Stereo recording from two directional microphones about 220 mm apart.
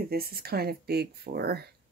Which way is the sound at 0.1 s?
45° right (ahead or behind).